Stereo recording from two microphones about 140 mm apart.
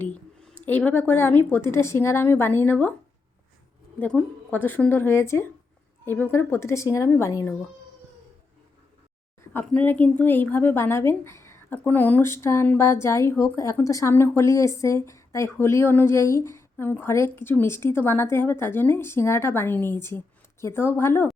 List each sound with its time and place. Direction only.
0.0 s a woman's voice: 10° left (ahead or behind)
4.0 s a woman's voice: 10° left (ahead or behind)
9.5 s a woman's voice: 15° left (ahead or behind)